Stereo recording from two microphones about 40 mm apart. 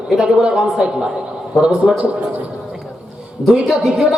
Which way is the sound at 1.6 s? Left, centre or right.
Centre.